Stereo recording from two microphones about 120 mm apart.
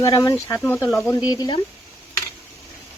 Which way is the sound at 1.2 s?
35° left (ahead or behind).